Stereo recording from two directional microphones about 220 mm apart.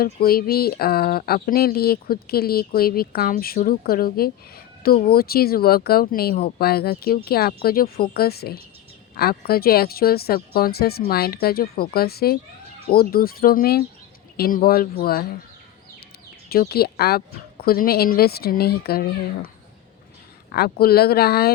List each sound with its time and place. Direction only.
0.0 s speech: 45° left (ahead or behind)
16.5 s speech: 45° left (ahead or behind)
20.5 s speech: 45° left (ahead or behind)